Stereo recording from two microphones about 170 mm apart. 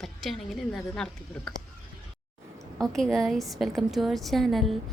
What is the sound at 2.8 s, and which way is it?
A woman's voice, centre (ahead or behind).